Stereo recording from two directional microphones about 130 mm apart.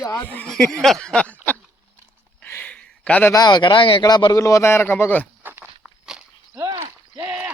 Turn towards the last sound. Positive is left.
turn(degrees=-20)  # may be behind; listen again after turning